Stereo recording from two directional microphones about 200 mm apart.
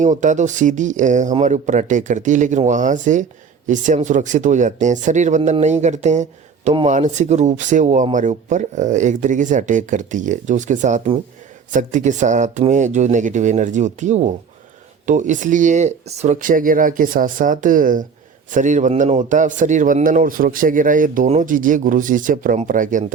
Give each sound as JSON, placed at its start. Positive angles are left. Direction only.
{"t": 0.0, "sound": "a man's voice", "side_deg": -40}